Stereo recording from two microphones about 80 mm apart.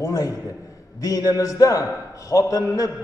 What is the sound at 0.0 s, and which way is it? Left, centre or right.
A man's voice, left.